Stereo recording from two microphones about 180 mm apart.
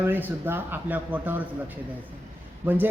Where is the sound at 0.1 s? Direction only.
10° right (ahead or behind).